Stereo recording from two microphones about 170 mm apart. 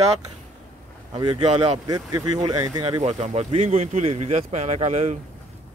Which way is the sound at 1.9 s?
20° right (ahead or behind).